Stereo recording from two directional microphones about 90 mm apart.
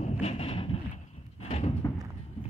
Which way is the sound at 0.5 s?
90° left.